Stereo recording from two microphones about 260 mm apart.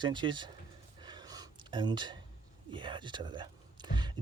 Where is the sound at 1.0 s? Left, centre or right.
Centre.